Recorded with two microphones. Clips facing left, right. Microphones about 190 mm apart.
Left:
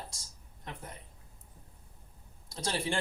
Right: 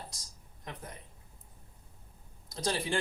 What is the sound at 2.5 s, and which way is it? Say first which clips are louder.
Speech: right 1 dB; 30° left (ahead or behind).